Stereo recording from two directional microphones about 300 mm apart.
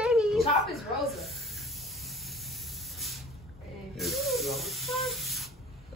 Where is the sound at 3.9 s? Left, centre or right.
Centre.